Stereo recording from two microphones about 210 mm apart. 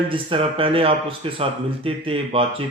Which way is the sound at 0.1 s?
25° right (ahead or behind).